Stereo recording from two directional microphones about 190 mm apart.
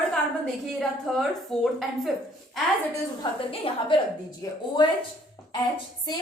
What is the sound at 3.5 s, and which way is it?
Speech, 30° left (ahead or behind).